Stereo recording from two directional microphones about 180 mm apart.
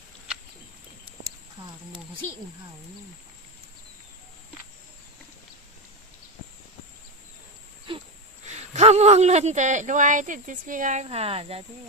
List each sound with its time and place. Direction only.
8.4 s speech: 40° right (ahead or behind)